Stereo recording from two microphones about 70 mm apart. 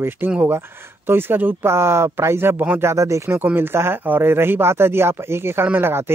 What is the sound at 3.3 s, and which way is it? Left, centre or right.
Speech, right.